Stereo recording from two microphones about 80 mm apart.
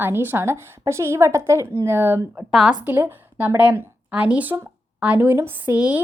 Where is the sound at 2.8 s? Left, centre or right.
Right.